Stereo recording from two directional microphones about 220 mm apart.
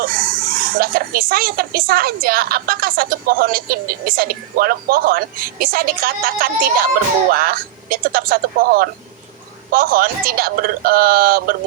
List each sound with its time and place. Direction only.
0.0 s speech: 40° right (ahead or behind)